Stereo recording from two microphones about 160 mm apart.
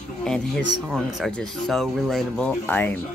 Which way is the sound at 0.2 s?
5° left (ahead or behind).